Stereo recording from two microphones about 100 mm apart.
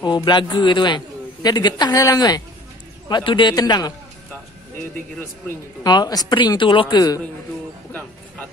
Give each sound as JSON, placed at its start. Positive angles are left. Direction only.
{"t": 0.0, "sound": "a man's voice", "side_deg": 45}
{"t": 5.9, "sound": "a man's voice", "side_deg": 40}